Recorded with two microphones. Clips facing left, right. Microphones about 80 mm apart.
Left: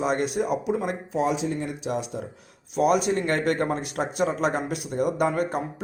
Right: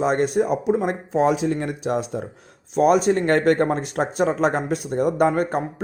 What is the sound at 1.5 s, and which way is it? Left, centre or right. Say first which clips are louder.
Speech: right 5 dB; right.